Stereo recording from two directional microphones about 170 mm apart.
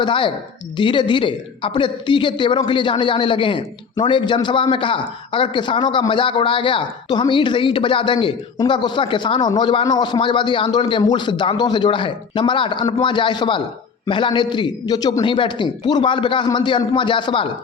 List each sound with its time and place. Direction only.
0.0 s a man's voice: 30° left (ahead or behind)